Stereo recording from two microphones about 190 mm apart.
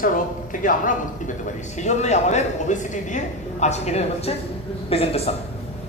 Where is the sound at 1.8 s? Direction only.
35° left (ahead or behind).